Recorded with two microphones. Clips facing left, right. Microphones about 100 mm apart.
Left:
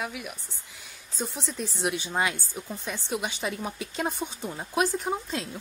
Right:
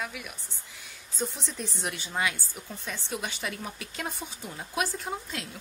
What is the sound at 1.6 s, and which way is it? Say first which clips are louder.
Speech: left 6 dB; 10° left (ahead or behind).